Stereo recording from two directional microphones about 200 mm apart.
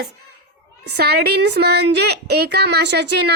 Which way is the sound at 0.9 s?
55° right (ahead or behind).